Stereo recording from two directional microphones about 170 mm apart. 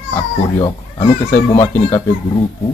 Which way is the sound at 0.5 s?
25° left (ahead or behind).